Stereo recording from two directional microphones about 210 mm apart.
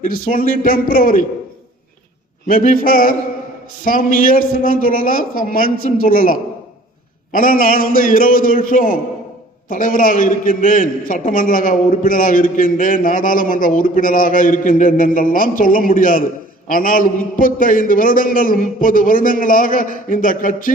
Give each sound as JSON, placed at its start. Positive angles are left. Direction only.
{"t": 0.0, "sound": "a man's voice", "side_deg": 40}
{"t": 2.5, "sound": "a man's voice", "side_deg": 40}